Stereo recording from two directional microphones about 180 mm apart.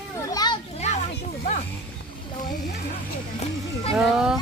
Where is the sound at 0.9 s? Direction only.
40° left (ahead or behind).